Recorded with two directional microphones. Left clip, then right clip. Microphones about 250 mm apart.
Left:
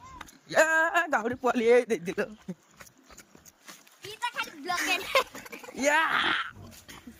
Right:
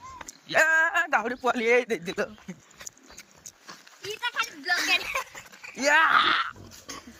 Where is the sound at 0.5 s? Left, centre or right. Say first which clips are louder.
Right 2 dB; left.